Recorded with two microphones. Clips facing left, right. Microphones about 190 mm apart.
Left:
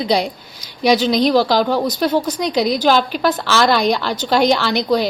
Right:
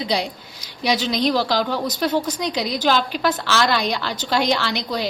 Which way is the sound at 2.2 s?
55° left (ahead or behind).